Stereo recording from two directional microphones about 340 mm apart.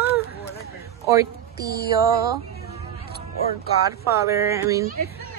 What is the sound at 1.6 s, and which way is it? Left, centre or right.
Music, left.